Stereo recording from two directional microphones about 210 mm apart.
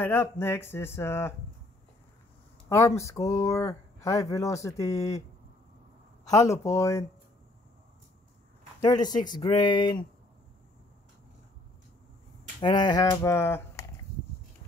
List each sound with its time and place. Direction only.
0.0 s speech: 10° left (ahead or behind)
3.0 s speech: 15° left (ahead or behind)
6.3 s speech: 15° left (ahead or behind)
8.8 s speech: 20° left (ahead or behind)
12.5 s speech: 20° left (ahead or behind)